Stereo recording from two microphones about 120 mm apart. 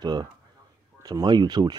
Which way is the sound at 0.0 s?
35° right (ahead or behind).